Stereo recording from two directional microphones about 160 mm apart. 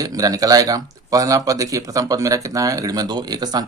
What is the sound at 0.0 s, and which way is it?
Speech, 20° right (ahead or behind).